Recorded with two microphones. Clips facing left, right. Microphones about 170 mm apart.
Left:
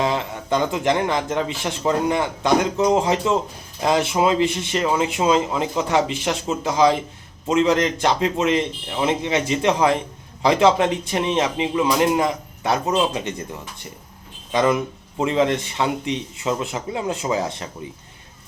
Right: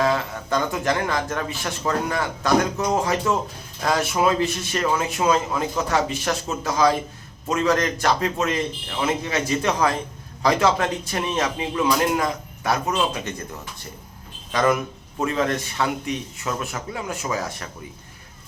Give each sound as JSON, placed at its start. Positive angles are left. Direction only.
{"t": 0.0, "sound": "a man's voice", "side_deg": 20}
{"t": 14.5, "sound": "a man's voice", "side_deg": 20}